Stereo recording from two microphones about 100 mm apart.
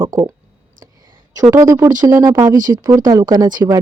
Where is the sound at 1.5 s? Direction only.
30° right (ahead or behind).